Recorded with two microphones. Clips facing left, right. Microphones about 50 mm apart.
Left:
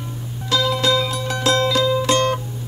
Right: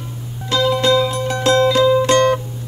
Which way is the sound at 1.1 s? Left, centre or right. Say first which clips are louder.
Right 4 dB; right.